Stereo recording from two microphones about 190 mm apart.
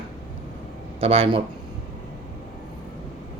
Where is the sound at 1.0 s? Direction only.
30° right (ahead or behind).